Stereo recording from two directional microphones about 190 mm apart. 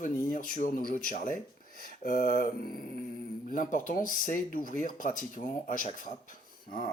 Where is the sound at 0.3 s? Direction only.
45° left (ahead or behind).